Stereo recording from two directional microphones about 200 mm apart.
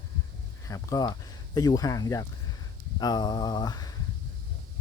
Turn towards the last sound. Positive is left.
turn(degrees=20)  # may be behind; listen again after turning